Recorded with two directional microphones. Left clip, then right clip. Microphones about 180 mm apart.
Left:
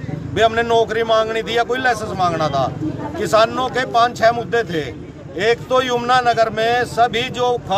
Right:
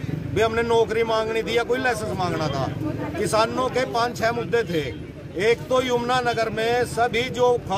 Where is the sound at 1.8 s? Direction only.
25° left (ahead or behind).